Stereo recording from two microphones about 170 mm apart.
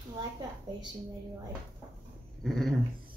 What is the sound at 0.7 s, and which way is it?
Speech, 25° right (ahead or behind).